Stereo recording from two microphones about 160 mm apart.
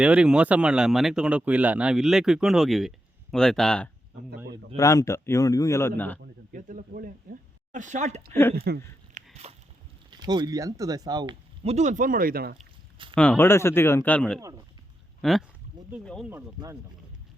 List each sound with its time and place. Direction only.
0.0 s speech: 5° right (ahead or behind)
4.8 s speech: 20° left (ahead or behind)
6.5 s speech: 55° right (ahead or behind)
8.7 s speech: 85° right
9.2 s a sound: 50° right (ahead or behind)
10.1 s speech: 25° right (ahead or behind)
11.6 s speech: 45° right (ahead or behind); by 12.5 s 70° right (ahead or behind)
13.1 s speech: 10° left (ahead or behind)